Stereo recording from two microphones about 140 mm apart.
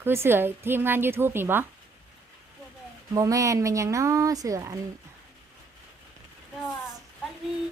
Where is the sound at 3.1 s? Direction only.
25° right (ahead or behind).